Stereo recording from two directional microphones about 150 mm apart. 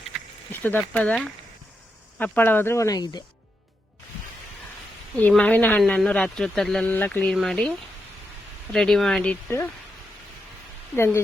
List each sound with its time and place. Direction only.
0.5 s speech: 15° left (ahead or behind)
5.1 s speech: 10° left (ahead or behind)
8.7 s speech: 5° left (ahead or behind)
10.9 s speech: 15° left (ahead or behind)